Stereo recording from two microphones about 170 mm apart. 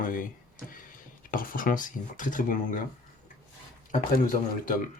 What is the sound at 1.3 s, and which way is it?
Speech, 55° left (ahead or behind).